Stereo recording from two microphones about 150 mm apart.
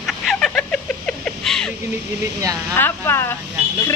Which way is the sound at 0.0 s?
Centre (ahead or behind).